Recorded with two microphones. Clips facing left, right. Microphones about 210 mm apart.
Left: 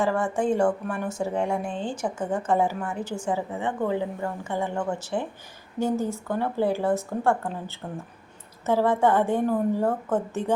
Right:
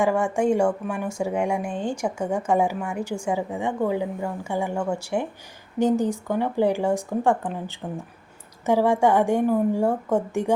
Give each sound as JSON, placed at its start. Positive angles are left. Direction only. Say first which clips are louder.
{"t": 0.0, "sound": "speech", "louder": "right 3 dB", "side_deg": -10}